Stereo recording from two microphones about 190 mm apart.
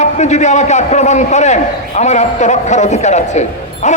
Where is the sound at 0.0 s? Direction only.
35° left (ahead or behind).